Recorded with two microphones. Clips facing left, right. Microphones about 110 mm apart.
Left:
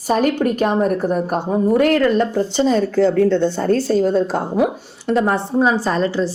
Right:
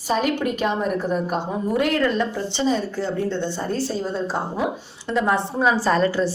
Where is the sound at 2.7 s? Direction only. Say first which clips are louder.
Left 9 dB; 90° left; by 5.2 s 55° left (ahead or behind).